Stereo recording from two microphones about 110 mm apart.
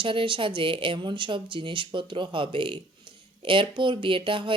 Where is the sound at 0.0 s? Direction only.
50° right (ahead or behind).